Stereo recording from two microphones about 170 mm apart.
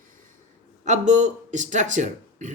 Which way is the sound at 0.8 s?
45° right (ahead or behind).